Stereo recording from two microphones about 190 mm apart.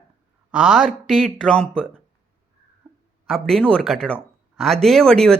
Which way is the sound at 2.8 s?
10° right (ahead or behind).